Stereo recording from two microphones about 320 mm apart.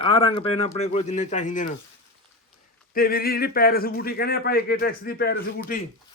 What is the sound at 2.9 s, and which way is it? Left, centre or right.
Speech, left.